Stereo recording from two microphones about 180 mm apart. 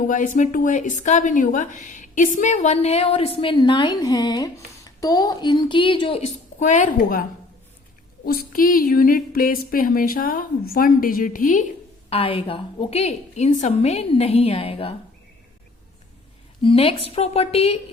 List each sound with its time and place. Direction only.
0.1 s speech: 45° left (ahead or behind)
12.1 s speech: 30° left (ahead or behind)
16.6 s speech: 30° left (ahead or behind)